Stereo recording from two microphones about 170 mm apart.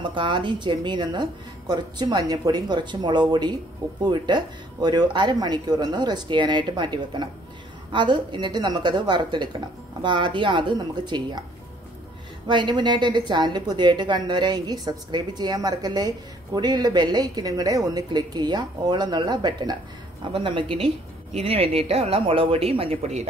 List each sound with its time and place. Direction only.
0.0 s a woman's voice: 30° right (ahead or behind)
12.4 s a woman's voice: 25° right (ahead or behind)